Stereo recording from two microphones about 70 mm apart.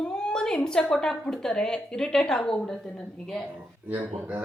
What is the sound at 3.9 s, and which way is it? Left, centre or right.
Speech, right.